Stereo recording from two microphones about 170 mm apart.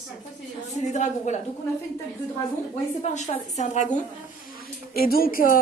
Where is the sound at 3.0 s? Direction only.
45° left (ahead or behind).